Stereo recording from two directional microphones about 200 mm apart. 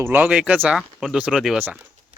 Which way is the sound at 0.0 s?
10° right (ahead or behind).